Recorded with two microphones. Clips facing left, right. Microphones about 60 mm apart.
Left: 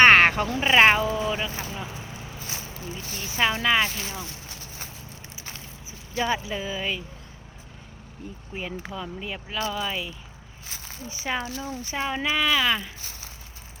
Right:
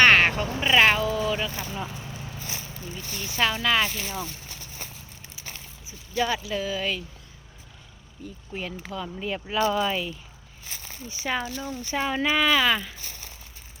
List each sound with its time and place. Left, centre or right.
0.0 s a sound: left
0.6 s speech: left
6.1 s speech: left
8.5 s speech: centre
9.2 s speech: centre